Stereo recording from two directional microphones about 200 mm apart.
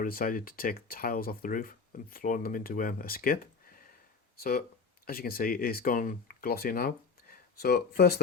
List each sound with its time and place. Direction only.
0.0 s speech: 45° left (ahead or behind)